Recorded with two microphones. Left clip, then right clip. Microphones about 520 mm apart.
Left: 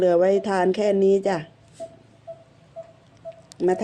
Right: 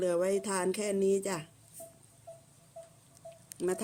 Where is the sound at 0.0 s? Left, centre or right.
Right.